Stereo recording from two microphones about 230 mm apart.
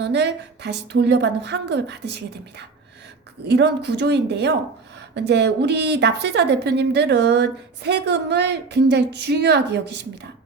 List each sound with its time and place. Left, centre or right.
0.0 s a woman's voice: right